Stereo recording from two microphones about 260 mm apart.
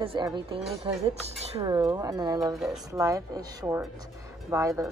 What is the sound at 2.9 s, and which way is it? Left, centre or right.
A woman's voice, centre.